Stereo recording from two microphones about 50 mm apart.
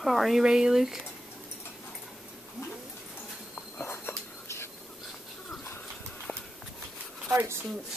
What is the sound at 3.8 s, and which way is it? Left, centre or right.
Whispering, left.